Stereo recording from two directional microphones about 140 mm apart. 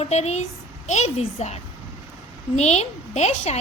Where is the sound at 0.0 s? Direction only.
50° left (ahead or behind).